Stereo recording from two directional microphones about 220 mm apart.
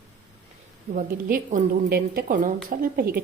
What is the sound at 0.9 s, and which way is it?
A woman's voice, 35° right (ahead or behind).